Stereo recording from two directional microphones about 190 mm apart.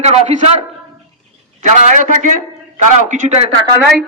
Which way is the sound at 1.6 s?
40° right (ahead or behind).